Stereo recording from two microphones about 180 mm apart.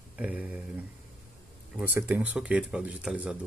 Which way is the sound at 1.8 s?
10° right (ahead or behind).